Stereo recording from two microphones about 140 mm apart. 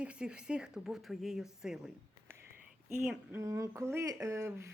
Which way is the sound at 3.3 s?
20° right (ahead or behind).